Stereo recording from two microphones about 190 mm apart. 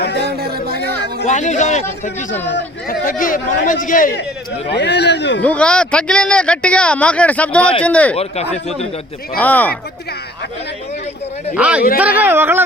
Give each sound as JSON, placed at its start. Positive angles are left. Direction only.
{"t": 0.0, "sound": "music", "side_deg": 60}
{"t": 0.3, "sound": "music", "side_deg": -55}
{"t": 1.3, "sound": "speech", "side_deg": 40}
{"t": 2.9, "sound": "speech", "side_deg": 50}
{"t": 4.7, "sound": "speech", "side_deg": 65}
{"t": 5.4, "sound": "speech", "side_deg": 5}
{"t": 8.1, "sound": "speech", "side_deg": 35}
{"t": 9.4, "sound": "speech", "side_deg": 10}
{"t": 11.5, "sound": "speech", "side_deg": -5}